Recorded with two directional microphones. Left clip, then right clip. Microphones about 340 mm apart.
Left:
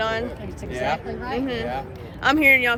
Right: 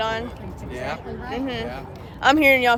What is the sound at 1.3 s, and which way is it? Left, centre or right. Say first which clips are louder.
Speech: left 2 dB; centre.